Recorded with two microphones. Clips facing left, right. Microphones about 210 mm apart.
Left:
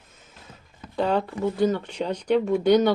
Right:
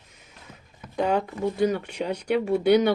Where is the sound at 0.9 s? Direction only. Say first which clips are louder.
Left 1 dB; 15° right (ahead or behind).